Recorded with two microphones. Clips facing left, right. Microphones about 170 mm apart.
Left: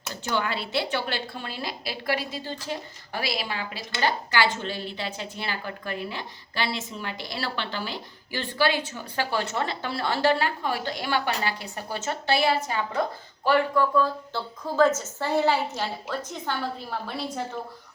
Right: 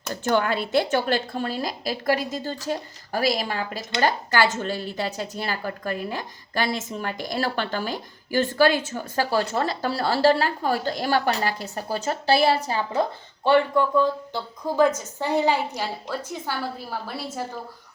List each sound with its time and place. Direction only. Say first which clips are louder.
0.1 s a woman's voice: right 6 dB; 50° right (ahead or behind); by 17.4 s 5° right (ahead or behind)